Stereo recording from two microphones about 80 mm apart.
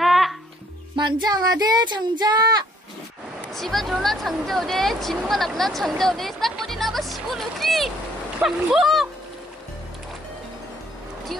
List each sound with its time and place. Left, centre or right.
0.0 s music: centre
0.9 s speech: right
3.5 s speech: centre